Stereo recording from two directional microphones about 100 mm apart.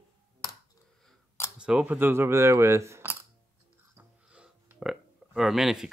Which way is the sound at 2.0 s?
25° right (ahead or behind).